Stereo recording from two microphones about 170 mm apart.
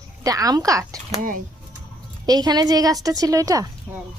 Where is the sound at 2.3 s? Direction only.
25° right (ahead or behind).